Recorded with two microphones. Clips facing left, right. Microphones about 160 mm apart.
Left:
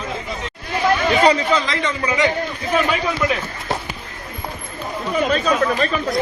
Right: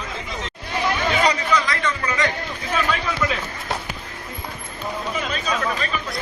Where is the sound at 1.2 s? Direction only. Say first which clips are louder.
Left 4 dB; 30° left (ahead or behind).